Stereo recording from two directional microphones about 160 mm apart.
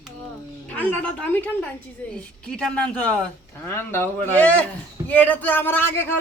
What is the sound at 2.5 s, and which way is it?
A man's voice, 5° left (ahead or behind).